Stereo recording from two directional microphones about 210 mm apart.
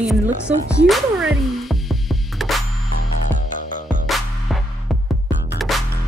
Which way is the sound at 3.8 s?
Centre (ahead or behind).